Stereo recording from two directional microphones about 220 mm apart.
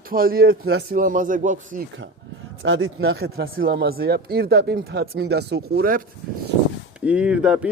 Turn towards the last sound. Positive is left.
turn(degrees=-5)  # may be behind; listen again after turning